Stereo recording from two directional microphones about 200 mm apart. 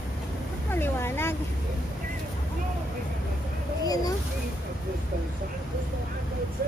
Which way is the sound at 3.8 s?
20° left (ahead or behind).